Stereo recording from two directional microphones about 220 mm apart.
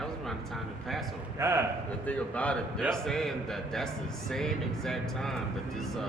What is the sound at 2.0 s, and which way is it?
A man's voice, 5° left (ahead or behind).